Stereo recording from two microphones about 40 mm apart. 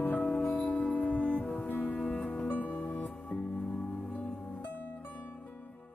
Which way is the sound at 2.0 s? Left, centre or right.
Left.